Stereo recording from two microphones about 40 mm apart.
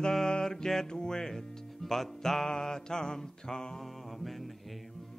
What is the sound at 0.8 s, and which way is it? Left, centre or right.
Music, centre.